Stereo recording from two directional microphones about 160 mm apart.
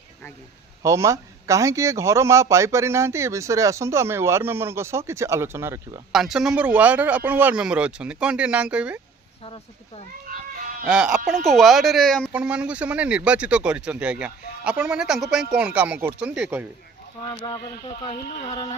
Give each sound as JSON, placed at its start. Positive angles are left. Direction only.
{"t": 0.8, "sound": "a man's voice", "side_deg": -20}
{"t": 6.1, "sound": "a man's voice", "side_deg": 0}
{"t": 9.4, "sound": "speech", "side_deg": 35}
{"t": 10.2, "sound": "goat", "side_deg": -55}
{"t": 10.8, "sound": "speech", "side_deg": -5}
{"t": 12.3, "sound": "a man's voice", "side_deg": -5}
{"t": 17.3, "sound": "speech", "side_deg": 30}